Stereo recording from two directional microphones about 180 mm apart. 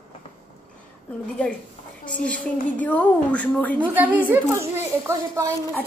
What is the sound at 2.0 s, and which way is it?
A woman's voice, 5° left (ahead or behind).